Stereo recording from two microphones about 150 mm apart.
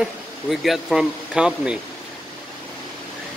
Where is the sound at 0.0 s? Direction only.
Centre (ahead or behind).